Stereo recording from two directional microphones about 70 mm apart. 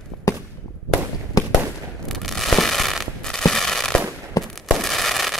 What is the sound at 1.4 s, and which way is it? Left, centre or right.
Fireworks, left.